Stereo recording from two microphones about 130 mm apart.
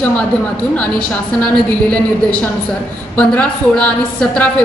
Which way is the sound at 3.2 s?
10° left (ahead or behind).